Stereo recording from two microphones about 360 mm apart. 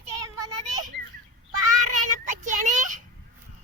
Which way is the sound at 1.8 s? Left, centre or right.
Right.